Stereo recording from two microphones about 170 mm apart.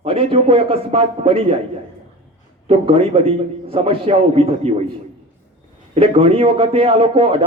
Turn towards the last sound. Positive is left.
turn(degrees=-30)  # may be behind; listen again after turning